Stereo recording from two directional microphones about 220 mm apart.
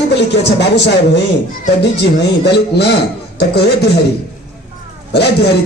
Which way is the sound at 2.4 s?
50° left (ahead or behind).